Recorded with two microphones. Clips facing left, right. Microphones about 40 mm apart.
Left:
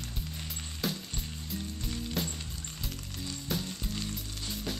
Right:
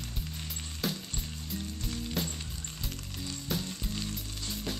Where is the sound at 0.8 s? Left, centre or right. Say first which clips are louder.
Even; centre.